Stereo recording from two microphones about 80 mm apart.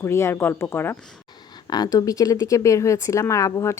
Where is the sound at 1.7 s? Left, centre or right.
Left.